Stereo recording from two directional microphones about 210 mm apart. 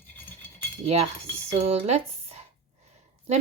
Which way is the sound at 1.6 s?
30° right (ahead or behind).